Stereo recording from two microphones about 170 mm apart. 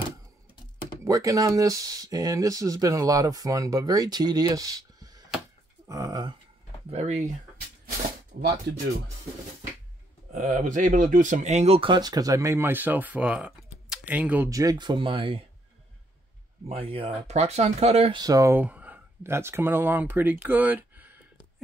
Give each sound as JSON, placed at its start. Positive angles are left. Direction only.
{"t": 1.0, "sound": "speech", "side_deg": -20}
{"t": 6.9, "sound": "speech", "side_deg": -40}
{"t": 8.4, "sound": "speech", "side_deg": -75}
{"t": 10.3, "sound": "speech", "side_deg": -50}
{"t": 14.5, "sound": "speech", "side_deg": -20}
{"t": 16.6, "sound": "speech", "side_deg": -35}
{"t": 18.2, "sound": "speech", "side_deg": -20}